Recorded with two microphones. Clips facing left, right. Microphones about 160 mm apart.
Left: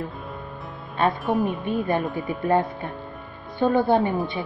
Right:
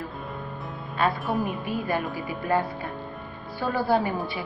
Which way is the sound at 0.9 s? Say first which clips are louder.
Left 3 dB; 20° left (ahead or behind).